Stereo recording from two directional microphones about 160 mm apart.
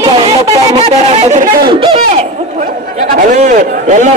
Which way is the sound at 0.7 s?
40° right (ahead or behind).